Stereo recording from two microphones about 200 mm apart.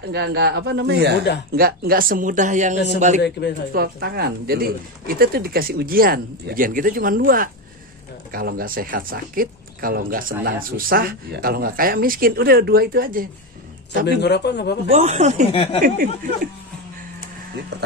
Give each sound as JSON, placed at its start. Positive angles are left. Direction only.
{"t": 0.1, "sound": "a man's voice", "side_deg": -55}
{"t": 3.2, "sound": "speech", "side_deg": 55}
{"t": 3.7, "sound": "speech", "side_deg": -50}
{"t": 14.0, "sound": "speech", "side_deg": 55}
{"t": 14.9, "sound": "speech", "side_deg": -35}
{"t": 15.5, "sound": "speech", "side_deg": 25}
{"t": 17.7, "sound": "a man's voice", "side_deg": -55}